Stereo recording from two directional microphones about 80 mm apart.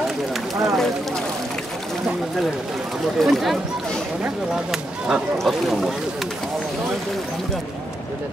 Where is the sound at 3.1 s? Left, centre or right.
Centre.